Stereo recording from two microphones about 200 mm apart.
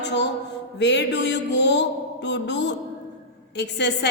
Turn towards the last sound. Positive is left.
turn(degrees=60)  # may be behind; listen again after turning